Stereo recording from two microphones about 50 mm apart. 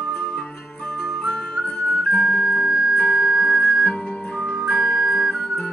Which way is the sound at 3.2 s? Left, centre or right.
Centre.